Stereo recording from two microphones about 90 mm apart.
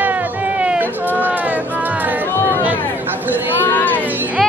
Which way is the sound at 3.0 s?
20° right (ahead or behind).